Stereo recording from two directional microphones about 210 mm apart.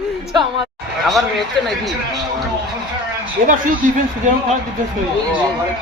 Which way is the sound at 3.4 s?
40° right (ahead or behind).